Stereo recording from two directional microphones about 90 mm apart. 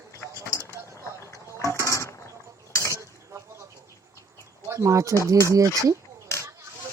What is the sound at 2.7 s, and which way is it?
Dishes, 30° left (ahead or behind).